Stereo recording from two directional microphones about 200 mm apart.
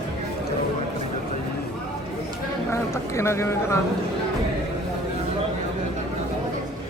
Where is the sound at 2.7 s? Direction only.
15° left (ahead or behind).